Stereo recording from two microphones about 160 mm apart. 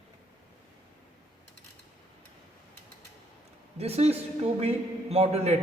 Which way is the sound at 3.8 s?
40° right (ahead or behind).